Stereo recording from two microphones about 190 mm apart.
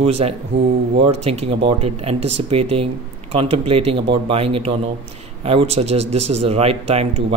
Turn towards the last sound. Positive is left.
turn(degrees=-35)  # may be behind; listen again after turning